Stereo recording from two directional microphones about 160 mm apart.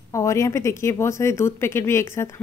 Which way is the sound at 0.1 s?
20° left (ahead or behind).